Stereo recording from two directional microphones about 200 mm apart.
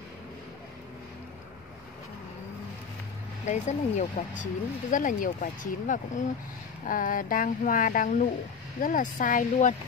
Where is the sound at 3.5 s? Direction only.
35° left (ahead or behind).